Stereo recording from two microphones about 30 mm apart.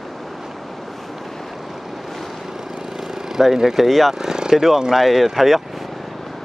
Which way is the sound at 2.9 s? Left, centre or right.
Centre.